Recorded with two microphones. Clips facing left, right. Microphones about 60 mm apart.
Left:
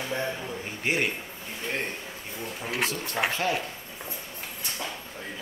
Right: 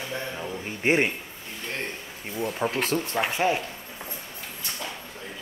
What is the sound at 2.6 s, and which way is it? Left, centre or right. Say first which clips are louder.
Speech: right 6 dB; right.